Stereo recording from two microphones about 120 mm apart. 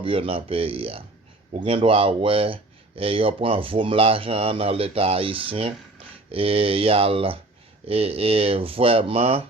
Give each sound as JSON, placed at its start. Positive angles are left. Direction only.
{"t": 0.0, "sound": "speech", "side_deg": -50}